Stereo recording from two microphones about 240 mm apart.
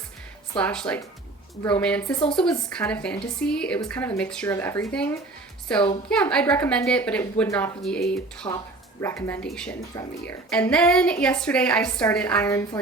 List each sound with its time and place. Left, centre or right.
0.6 s a woman's voice: centre
8.4 s speech: centre
9.9 s speech: centre
10.5 s a woman's voice: centre